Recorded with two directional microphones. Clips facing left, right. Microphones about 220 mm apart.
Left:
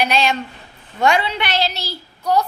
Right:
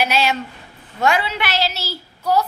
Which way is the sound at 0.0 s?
5° right (ahead or behind).